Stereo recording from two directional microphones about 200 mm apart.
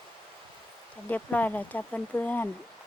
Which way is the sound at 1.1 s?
10° left (ahead or behind).